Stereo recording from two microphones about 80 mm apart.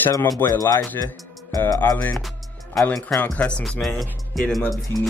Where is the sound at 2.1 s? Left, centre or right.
Centre.